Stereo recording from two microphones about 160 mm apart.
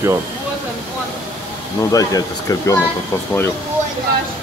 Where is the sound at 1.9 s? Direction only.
20° left (ahead or behind).